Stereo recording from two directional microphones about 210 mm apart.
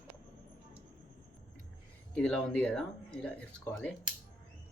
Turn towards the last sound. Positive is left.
turn(degrees=5)  # may be behind; listen again after turning